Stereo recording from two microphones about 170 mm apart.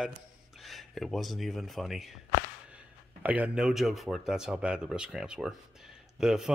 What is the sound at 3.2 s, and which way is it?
Speech, 10° right (ahead or behind).